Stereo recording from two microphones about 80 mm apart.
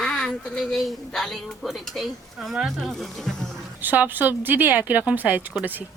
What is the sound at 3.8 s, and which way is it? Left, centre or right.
Speech, right.